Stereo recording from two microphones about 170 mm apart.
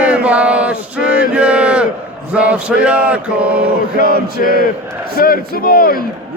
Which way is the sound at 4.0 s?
55° left (ahead or behind).